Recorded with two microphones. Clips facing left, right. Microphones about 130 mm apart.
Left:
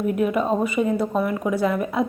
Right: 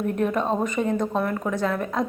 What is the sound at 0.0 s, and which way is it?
A woman's voice, 10° left (ahead or behind).